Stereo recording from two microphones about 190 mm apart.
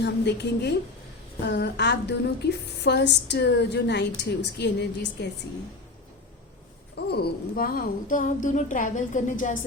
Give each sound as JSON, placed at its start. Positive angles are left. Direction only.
{"t": 0.0, "sound": "a woman's voice", "side_deg": 65}
{"t": 6.9, "sound": "speech", "side_deg": 55}